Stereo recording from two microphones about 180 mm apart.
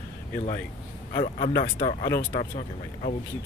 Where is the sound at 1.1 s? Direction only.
30° left (ahead or behind).